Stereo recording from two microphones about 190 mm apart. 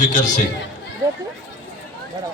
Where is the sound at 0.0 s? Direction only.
45° left (ahead or behind).